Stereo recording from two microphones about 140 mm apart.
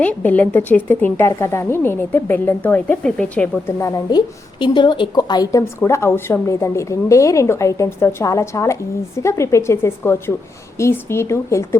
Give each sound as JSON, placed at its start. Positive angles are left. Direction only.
{"t": 0.0, "sound": "a woman's voice", "side_deg": 10}
{"t": 3.8, "sound": "speech", "side_deg": 25}